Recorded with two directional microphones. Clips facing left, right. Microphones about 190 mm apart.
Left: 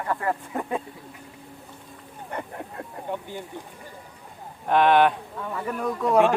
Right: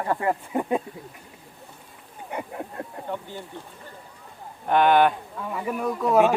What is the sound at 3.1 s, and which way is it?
Speech, 15° left (ahead or behind).